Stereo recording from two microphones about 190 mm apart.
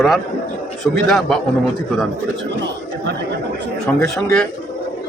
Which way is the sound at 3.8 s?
Centre (ahead or behind).